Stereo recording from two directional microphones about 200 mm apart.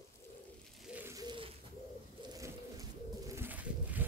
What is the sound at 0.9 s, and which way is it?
Bird, 15° right (ahead or behind).